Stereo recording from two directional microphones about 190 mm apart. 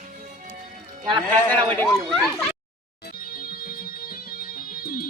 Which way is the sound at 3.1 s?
50° left (ahead or behind).